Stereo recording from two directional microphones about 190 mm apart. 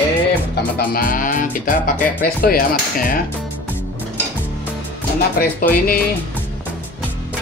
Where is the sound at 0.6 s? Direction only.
50° left (ahead or behind).